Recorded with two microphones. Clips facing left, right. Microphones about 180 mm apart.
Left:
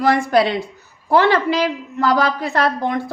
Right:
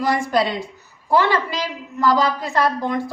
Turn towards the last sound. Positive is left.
turn(degrees=60)  # may be behind; listen again after turning